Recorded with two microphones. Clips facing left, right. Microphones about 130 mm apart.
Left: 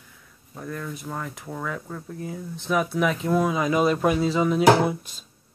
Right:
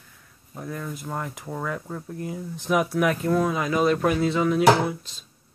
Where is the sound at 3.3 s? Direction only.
5° left (ahead or behind).